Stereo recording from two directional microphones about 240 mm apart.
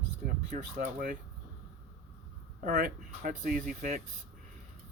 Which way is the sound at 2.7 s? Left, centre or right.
Right.